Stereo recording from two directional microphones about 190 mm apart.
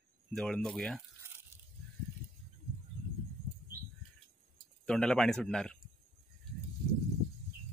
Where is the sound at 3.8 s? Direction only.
50° right (ahead or behind).